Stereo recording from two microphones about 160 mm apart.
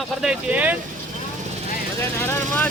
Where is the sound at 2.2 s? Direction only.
10° left (ahead or behind).